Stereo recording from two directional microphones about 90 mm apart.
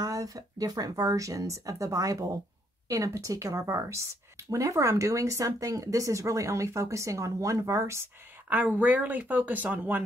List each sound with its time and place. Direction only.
0.0 s a woman's voice: 40° right (ahead or behind)
8.5 s speech: 20° right (ahead or behind)